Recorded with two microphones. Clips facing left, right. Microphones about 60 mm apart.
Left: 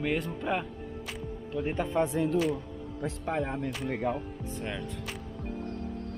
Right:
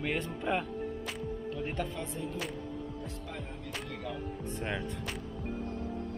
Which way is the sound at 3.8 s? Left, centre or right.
Left.